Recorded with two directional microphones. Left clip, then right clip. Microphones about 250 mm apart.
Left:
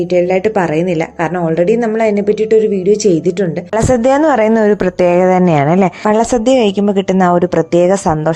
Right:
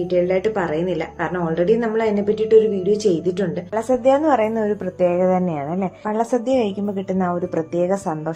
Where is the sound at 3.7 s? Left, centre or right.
Left.